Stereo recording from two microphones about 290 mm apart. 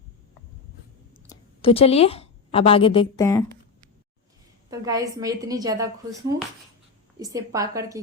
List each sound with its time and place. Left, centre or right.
1.3 s a woman's voice: centre
4.7 s a woman's voice: centre